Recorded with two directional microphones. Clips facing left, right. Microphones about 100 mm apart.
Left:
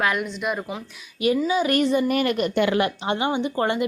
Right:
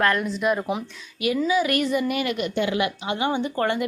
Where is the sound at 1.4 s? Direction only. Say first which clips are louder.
Left 1 dB; 30° left (ahead or behind).